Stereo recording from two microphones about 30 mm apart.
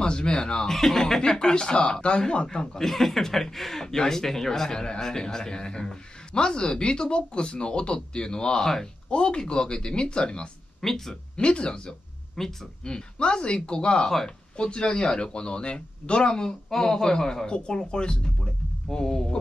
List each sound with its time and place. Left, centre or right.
0.0 s a man's voice: left
0.7 s speech: centre
1.2 s a man's voice: centre
1.5 s a man's voice: left
2.8 s a man's voice: centre; by 10.5 s left
10.8 s speech: centre
11.3 s speech: left
12.4 s speech: centre
12.8 s speech: left
16.4 s speech: centre
17.5 s a man's voice: left